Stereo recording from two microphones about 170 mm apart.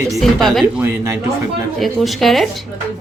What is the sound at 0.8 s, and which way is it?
Speech, 15° right (ahead or behind).